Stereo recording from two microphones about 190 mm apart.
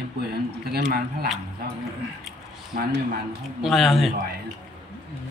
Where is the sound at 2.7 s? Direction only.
45° right (ahead or behind).